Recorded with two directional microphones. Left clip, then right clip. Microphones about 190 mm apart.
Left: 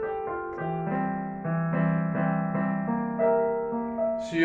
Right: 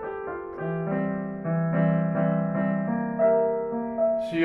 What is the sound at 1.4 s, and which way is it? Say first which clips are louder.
Music: right 4 dB; 35° left (ahead or behind).